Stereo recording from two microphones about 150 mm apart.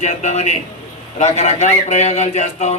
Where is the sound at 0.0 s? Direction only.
50° left (ahead or behind).